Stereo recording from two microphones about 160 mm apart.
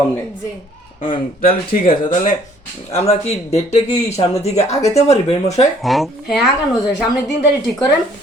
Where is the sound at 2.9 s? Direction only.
45° left (ahead or behind).